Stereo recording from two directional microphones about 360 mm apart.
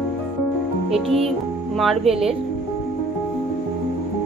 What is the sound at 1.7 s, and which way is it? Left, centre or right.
Speech, centre.